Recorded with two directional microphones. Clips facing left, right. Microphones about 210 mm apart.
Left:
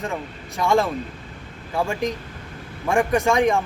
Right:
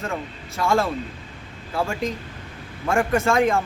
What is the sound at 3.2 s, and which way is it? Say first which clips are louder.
Speech: left 1 dB; 15° left (ahead or behind).